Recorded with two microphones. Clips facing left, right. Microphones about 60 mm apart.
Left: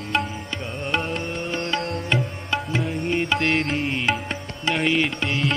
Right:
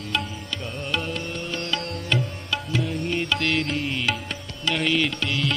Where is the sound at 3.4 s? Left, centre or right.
Left.